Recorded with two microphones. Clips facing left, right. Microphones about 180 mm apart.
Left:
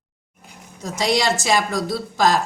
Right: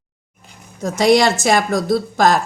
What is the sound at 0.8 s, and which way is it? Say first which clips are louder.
Speech: right 7 dB; 55° right (ahead or behind).